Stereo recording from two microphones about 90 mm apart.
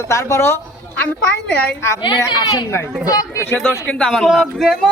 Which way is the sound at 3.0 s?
45° left (ahead or behind).